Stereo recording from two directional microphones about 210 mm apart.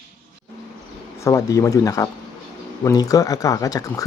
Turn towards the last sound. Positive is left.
turn(degrees=15)  # may be behind; listen again after turning